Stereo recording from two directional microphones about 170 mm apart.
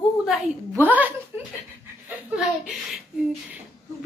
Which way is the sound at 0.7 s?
10° right (ahead or behind).